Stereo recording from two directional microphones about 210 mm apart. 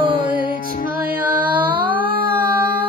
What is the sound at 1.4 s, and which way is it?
Music, 10° right (ahead or behind).